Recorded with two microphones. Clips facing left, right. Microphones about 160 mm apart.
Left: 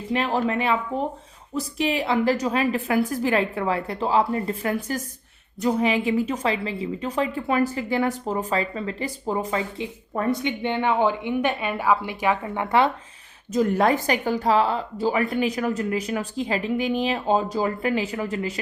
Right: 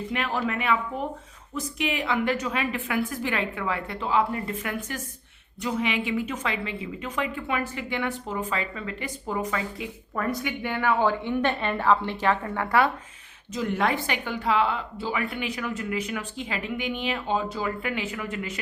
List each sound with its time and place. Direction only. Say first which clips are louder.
0.1 s speech: left 7 dB; 30° left (ahead or behind)
13.5 s speech: left 6 dB; 40° left (ahead or behind)